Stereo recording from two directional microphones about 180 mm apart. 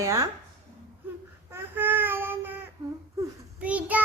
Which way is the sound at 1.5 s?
10° right (ahead or behind).